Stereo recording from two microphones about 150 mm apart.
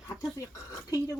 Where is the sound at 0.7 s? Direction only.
20° left (ahead or behind).